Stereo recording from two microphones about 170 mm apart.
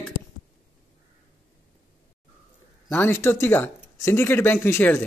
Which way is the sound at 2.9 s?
15° left (ahead or behind).